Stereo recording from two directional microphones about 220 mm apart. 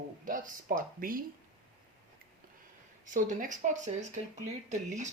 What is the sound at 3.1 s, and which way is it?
Speech, 35° right (ahead or behind).